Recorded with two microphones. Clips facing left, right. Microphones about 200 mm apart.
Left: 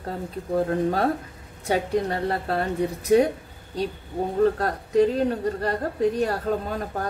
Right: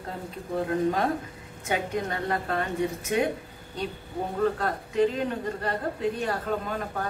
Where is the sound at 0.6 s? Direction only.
35° left (ahead or behind).